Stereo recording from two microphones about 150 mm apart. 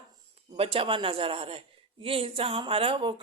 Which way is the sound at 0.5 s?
40° right (ahead or behind).